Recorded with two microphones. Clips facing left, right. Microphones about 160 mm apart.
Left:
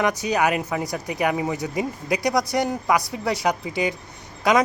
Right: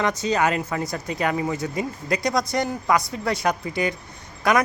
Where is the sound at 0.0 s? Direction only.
15° left (ahead or behind).